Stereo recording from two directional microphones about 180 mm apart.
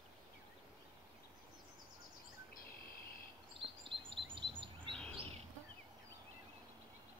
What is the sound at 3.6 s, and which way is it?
Chirp, 30° right (ahead or behind).